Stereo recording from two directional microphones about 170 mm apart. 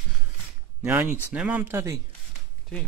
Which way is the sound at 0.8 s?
15° right (ahead or behind).